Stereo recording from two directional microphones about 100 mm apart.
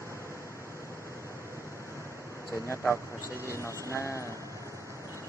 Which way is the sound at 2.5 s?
25° left (ahead or behind).